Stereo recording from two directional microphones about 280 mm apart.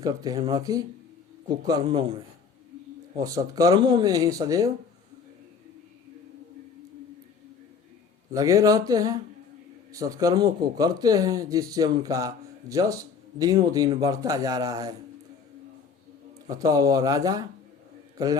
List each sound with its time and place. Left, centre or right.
0.0 s speech: centre
3.2 s speech: centre
8.3 s speech: centre
16.5 s speech: centre